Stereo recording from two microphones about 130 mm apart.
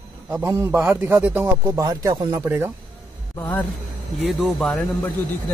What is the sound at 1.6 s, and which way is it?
Speech, 25° right (ahead or behind).